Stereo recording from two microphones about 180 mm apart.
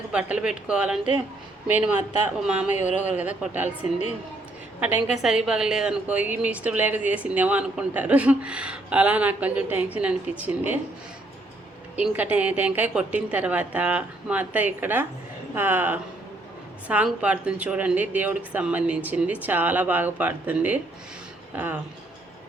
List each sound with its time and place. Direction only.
0.1 s a woman's voice: 5° right (ahead or behind)
2.7 s speech: 40° left (ahead or behind)
3.1 s a woman's voice: 5° right (ahead or behind)
4.8 s a woman's voice: 10° right (ahead or behind)
11.9 s a woman's voice: 10° right (ahead or behind)